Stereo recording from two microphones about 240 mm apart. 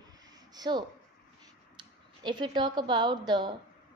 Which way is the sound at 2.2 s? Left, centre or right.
Centre.